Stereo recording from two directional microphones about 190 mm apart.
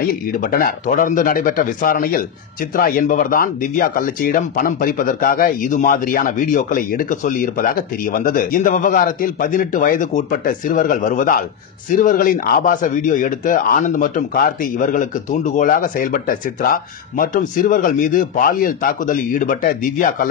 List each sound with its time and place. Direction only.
0.0 s speech: 50° left (ahead or behind)